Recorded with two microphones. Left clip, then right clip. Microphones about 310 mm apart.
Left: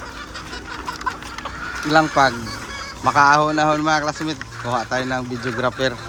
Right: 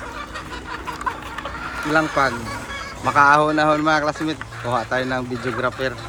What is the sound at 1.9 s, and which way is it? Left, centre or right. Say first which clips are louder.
Speech: left 3 dB; centre.